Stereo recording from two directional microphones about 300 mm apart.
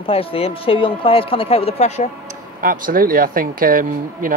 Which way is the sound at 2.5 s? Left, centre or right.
Right.